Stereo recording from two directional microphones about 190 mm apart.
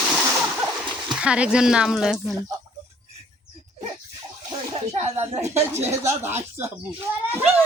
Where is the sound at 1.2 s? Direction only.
5° right (ahead or behind).